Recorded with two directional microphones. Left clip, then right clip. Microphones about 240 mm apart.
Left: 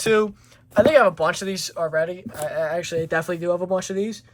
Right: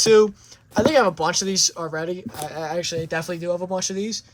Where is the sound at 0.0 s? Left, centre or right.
Centre.